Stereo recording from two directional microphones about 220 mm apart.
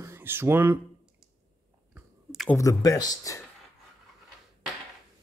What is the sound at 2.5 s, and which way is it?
Speech, 15° left (ahead or behind).